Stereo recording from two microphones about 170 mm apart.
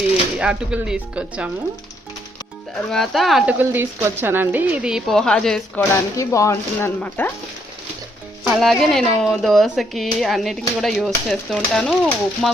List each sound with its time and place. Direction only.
0.3 s speech: 5° right (ahead or behind)
2.9 s speech: centre (ahead or behind)
6.1 s speech: 20° left (ahead or behind)
8.4 s speech: centre (ahead or behind)